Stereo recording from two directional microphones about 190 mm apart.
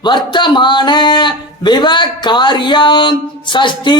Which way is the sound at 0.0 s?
25° left (ahead or behind).